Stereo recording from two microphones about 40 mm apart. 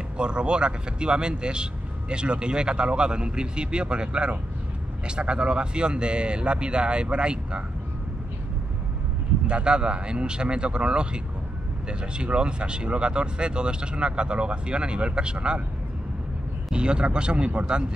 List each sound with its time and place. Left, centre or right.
0.2 s speech: right
9.5 s speech: right
16.7 s speech: right